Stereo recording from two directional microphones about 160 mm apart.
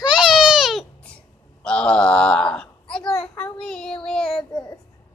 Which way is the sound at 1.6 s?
5° left (ahead or behind).